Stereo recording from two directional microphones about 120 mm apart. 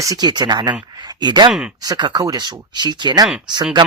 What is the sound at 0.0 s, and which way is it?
Speech, 30° right (ahead or behind).